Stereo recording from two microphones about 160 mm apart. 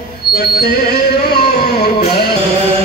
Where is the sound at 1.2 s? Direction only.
80° left.